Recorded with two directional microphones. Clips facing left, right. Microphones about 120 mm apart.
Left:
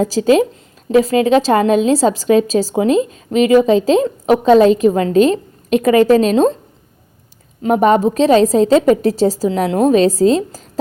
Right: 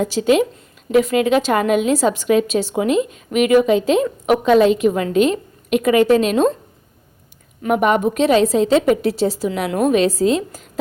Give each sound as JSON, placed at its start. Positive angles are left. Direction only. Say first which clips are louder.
{"t": 0.0, "sound": "a woman's voice", "louder": "left 3 dB", "side_deg": 35}
{"t": 7.6, "sound": "a woman's voice", "louder": "left 4 dB", "side_deg": 35}